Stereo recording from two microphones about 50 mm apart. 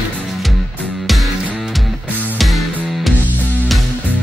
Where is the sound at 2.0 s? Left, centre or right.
Right.